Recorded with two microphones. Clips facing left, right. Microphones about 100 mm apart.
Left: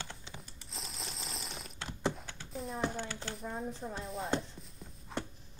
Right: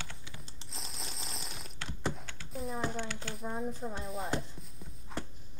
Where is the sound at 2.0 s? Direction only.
Centre (ahead or behind).